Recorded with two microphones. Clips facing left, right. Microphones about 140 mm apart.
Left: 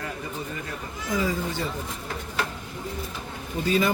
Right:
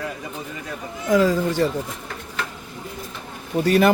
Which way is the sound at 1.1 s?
90° right.